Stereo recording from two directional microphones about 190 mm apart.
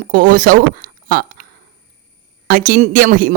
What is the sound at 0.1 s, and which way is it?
Speech, 45° right (ahead or behind).